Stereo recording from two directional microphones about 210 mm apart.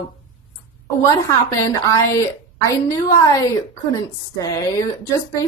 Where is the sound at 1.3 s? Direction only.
15° left (ahead or behind).